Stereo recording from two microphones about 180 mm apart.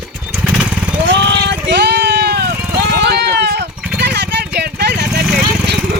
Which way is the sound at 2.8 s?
70° right (ahead or behind).